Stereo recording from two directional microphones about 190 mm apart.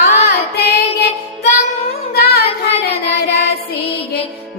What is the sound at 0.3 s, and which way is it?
Child singing, 55° left (ahead or behind).